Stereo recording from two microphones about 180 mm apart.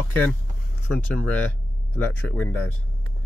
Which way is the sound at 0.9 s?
10° left (ahead or behind).